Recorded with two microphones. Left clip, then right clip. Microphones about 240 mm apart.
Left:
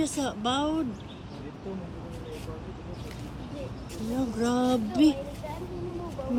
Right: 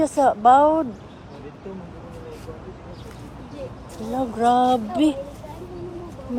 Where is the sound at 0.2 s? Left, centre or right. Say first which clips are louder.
Right 15 dB; right.